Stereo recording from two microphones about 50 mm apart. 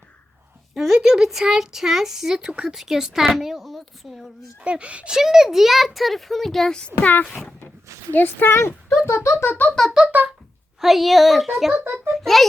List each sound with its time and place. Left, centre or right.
0.7 s a child's voice: centre
4.6 s speech: right
5.1 s a child's voice: centre
7.0 s speech: left
7.3 s a child's voice: centre
8.1 s speech: left
8.4 s speech: left
9.5 s speech: left
10.8 s a child's voice: centre
11.7 s a child's voice: right
12.1 s a child's voice: centre